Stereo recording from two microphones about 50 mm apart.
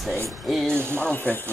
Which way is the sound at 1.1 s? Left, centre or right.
Left.